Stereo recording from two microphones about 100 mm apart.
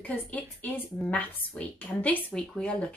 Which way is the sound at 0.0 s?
20° left (ahead or behind).